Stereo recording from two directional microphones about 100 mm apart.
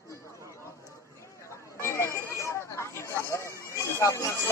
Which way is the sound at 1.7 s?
25° left (ahead or behind).